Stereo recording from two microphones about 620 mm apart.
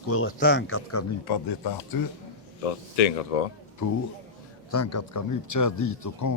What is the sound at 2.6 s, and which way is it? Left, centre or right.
Speech, left.